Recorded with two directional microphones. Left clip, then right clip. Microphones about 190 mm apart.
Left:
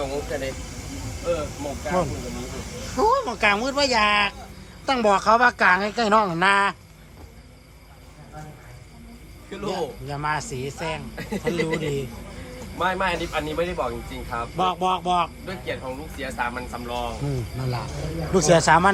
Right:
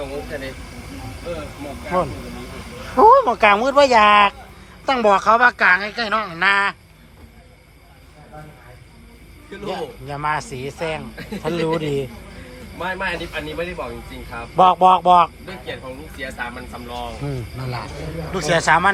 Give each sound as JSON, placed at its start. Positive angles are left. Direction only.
{"t": 2.9, "sound": "a man's voice", "side_deg": -5}
{"t": 9.6, "sound": "a man's voice", "side_deg": 10}